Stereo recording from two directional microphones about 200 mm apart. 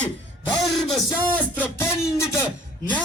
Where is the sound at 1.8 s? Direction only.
15° left (ahead or behind).